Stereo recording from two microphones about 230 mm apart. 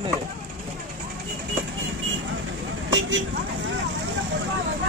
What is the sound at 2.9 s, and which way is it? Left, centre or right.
Vehicle, right.